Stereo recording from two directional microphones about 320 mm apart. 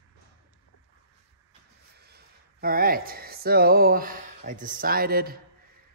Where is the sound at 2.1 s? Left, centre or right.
Right.